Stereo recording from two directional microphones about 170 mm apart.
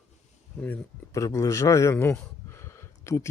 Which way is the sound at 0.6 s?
5° left (ahead or behind).